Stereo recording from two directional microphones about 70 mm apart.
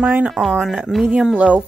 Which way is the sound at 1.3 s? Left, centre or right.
Centre.